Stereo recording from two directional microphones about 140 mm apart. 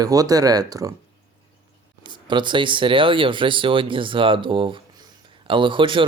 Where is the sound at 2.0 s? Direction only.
35° right (ahead or behind).